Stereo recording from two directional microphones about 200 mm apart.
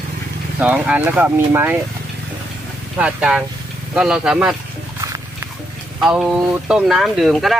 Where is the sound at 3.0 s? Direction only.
5° right (ahead or behind).